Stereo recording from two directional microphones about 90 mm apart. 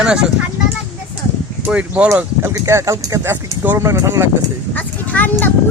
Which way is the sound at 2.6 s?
35° right (ahead or behind).